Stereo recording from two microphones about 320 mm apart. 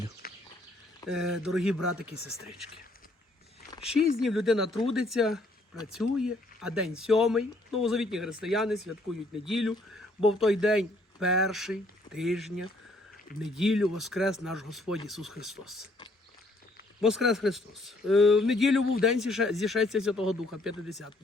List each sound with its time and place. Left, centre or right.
0.2 s bird: left
1.0 s speech: centre
4.2 s speech: centre
17.0 s speech: centre